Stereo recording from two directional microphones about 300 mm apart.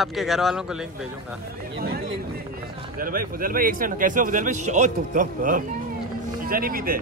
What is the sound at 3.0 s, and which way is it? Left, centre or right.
A man's voice, right.